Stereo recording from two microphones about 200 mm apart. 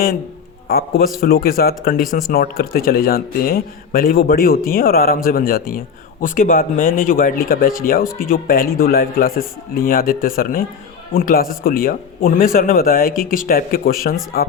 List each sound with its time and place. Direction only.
0.7 s speech: 50° left (ahead or behind)